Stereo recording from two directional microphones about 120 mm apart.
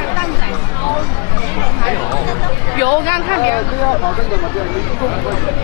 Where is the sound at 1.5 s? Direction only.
25° left (ahead or behind).